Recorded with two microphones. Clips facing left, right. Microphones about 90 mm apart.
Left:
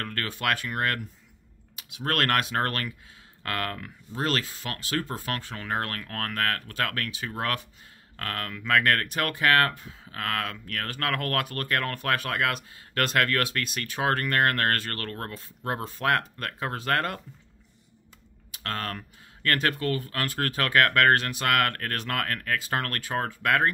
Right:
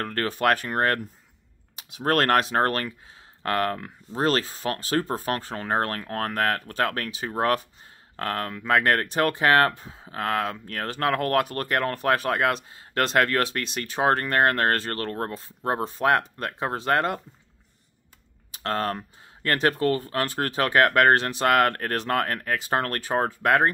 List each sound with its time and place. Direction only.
0.0 s speech: 30° right (ahead or behind)
18.5 s speech: 30° right (ahead or behind)